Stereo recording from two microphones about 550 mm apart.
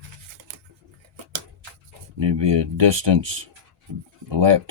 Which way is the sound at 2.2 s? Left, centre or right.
Right.